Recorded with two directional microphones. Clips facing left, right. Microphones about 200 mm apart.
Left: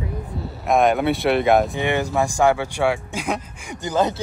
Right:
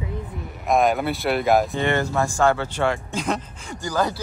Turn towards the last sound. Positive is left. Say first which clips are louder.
# left 3 dB
turn(degrees=20)  # may be behind; listen again after turning